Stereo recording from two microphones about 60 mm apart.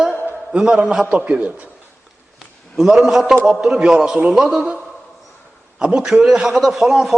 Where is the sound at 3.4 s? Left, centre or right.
Centre.